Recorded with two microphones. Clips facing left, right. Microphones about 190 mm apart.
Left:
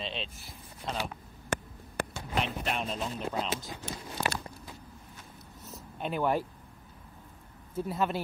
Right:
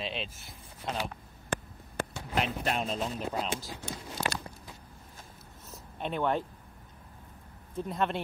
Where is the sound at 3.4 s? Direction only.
Centre (ahead or behind).